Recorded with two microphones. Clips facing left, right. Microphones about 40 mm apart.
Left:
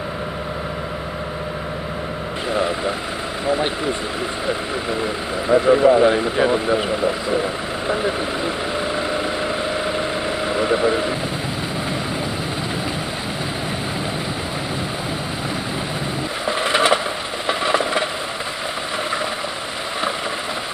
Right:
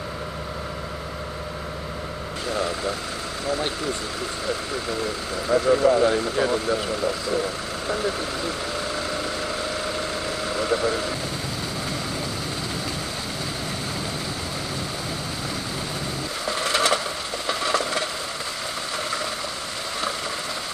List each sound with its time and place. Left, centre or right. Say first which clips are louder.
2.5 s speech: left 5 dB; left
5.0 s speech: left 5 dB; left
9.9 s vehicle: left 5 dB; left
16.4 s vehicle: left 5 dB; left
17.5 s a sound: left 5 dB; left